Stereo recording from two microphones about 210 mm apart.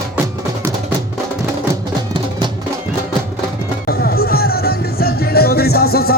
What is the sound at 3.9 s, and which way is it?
Music, 45° left (ahead or behind).